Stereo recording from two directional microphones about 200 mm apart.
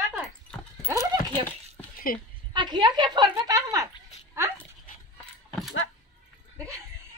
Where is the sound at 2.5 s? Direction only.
20° right (ahead or behind).